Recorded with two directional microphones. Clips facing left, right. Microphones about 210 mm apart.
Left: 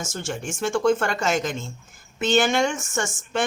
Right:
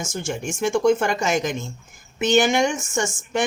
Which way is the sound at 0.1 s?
15° right (ahead or behind).